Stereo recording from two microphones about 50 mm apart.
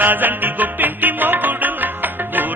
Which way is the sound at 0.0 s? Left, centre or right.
Right.